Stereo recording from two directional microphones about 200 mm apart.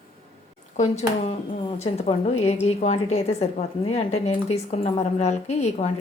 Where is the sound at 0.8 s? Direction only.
30° left (ahead or behind).